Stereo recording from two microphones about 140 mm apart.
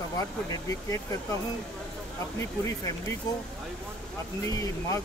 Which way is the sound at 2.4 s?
20° left (ahead or behind).